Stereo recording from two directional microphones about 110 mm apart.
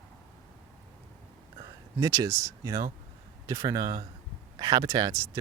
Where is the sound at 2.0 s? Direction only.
30° right (ahead or behind).